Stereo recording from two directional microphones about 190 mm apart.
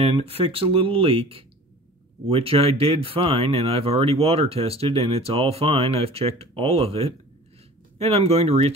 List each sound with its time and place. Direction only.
0.0 s speech: 30° right (ahead or behind)